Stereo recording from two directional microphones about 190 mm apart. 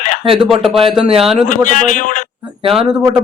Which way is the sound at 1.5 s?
45° left (ahead or behind).